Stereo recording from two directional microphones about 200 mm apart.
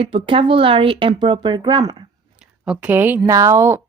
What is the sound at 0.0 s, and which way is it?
Speech, 25° right (ahead or behind).